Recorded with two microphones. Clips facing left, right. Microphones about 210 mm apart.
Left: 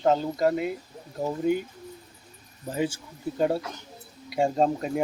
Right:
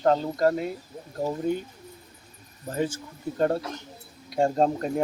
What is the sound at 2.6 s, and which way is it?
Speech, 10° left (ahead or behind).